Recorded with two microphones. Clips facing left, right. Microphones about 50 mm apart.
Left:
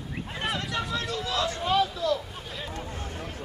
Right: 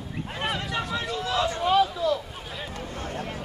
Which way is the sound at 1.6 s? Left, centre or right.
Centre.